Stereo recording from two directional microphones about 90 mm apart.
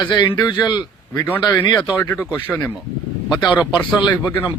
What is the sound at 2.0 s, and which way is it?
Speech, 25° left (ahead or behind).